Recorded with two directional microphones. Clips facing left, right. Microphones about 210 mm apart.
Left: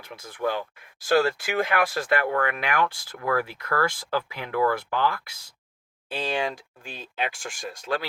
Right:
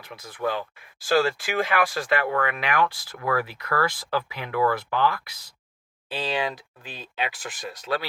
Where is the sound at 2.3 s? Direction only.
45° left (ahead or behind).